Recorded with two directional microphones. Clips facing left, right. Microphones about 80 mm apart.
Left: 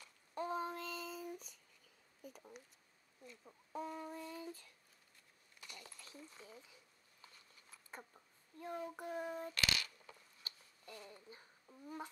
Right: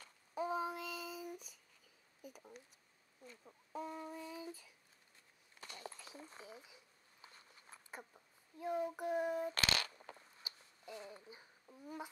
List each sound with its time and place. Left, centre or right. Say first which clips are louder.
0.3 s child singing: right 2 dB; centre
2.2 s speech: even; centre
5.6 s a sound: right 6 dB; right
6.1 s speech: right 2 dB; right
6.4 s a sound: right 3 dB; centre
7.2 s a sound: right 4 dB; right
7.9 s a child's voice: right 1 dB; centre
9.5 s coin: right 2 dB; right
11.2 s speech: right 1 dB; centre